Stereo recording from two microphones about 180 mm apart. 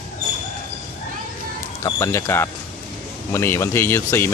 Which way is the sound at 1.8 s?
15° left (ahead or behind).